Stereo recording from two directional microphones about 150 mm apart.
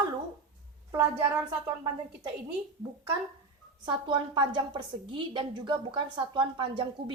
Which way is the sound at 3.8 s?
30° right (ahead or behind).